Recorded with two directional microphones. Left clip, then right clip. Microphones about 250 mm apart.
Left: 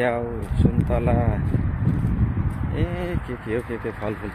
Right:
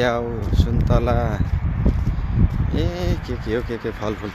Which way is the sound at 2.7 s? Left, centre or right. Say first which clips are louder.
Right 2 dB; centre.